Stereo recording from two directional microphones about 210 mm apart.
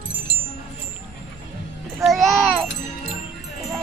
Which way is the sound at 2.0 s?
Centre (ahead or behind).